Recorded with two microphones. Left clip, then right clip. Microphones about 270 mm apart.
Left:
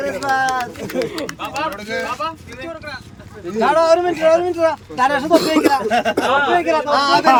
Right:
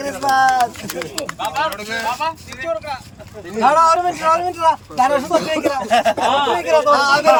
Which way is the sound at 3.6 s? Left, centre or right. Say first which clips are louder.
Right 1 dB; centre.